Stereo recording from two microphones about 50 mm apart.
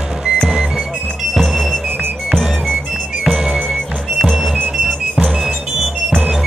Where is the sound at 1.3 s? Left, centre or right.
Centre.